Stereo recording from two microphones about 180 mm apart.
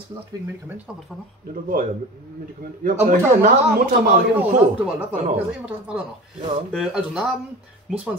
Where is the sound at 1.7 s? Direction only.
50° right (ahead or behind).